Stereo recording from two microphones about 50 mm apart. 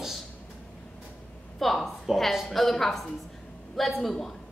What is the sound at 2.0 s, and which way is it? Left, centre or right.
A woman's voice, centre.